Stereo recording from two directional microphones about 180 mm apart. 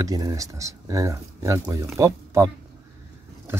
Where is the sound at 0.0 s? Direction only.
20° right (ahead or behind).